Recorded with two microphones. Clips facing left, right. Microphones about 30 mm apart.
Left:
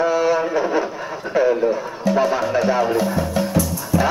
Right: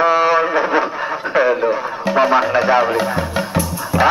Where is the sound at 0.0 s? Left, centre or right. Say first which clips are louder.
Right 4 dB; right.